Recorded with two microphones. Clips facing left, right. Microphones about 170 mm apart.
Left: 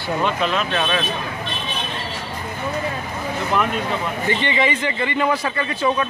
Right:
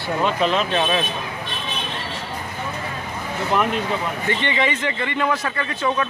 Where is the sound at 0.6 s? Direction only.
20° right (ahead or behind).